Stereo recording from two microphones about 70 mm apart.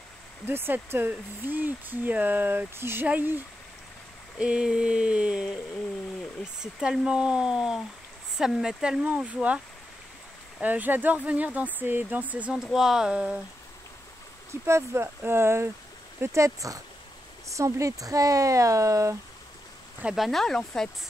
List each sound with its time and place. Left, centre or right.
0.5 s speech: right
4.4 s speech: centre
6.6 s speech: centre
9.0 s speech: right
10.6 s speech: right
12.7 s speech: centre
14.5 s speech: right
20.2 s speech: centre